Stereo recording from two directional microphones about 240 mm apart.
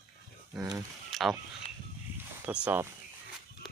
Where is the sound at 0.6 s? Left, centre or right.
Centre.